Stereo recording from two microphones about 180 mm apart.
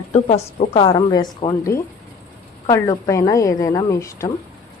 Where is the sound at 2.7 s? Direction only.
15° left (ahead or behind).